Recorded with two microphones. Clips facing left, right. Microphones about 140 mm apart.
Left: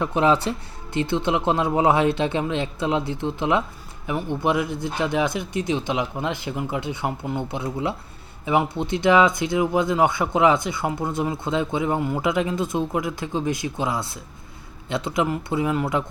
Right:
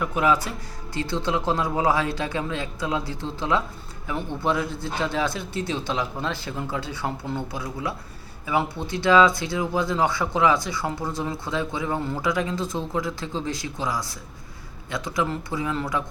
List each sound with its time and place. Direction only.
0.0 s a man's voice: 25° left (ahead or behind)